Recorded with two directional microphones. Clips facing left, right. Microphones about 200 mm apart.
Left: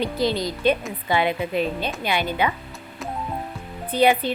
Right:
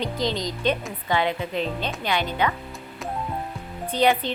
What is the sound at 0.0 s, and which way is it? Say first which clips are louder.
A woman's voice: left 3 dB; 10° left (ahead or behind).